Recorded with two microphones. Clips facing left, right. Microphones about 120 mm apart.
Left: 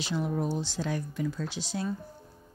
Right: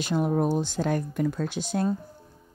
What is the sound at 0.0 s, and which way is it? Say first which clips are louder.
Speech: right 6 dB; 50° right (ahead or behind).